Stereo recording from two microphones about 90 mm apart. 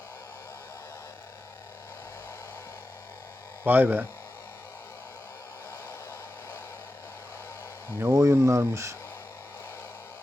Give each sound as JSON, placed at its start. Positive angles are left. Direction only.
{"t": 3.6, "sound": "speech", "side_deg": -20}
{"t": 8.0, "sound": "speech", "side_deg": -30}